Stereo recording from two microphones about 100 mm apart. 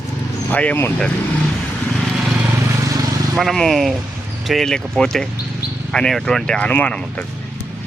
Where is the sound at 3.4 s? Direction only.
Centre (ahead or behind).